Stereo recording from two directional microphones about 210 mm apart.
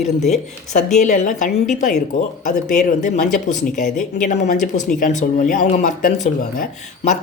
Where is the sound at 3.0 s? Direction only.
35° left (ahead or behind).